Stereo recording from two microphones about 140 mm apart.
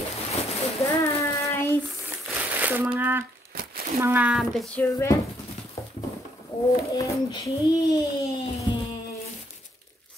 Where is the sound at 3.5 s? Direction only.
90° right.